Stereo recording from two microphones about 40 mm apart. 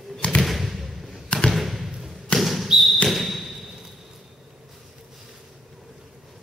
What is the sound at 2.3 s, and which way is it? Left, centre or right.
Basketball bounce, centre.